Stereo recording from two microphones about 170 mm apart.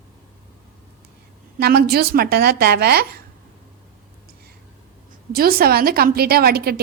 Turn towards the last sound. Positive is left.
turn(degrees=-65)  # may be behind; listen again after turning